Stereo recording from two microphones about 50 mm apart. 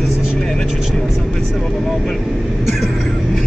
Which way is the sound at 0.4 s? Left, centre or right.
Centre.